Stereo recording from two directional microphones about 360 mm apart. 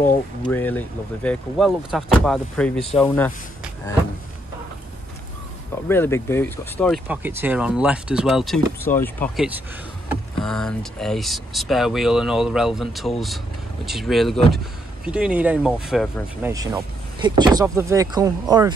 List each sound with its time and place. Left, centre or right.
0.0 s speech: left
0.5 s speech: centre
3.0 s a sound: centre
5.9 s speech: centre
16.5 s speech: centre